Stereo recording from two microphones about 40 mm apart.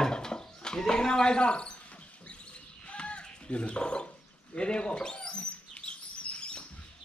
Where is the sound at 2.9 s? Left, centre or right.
Left.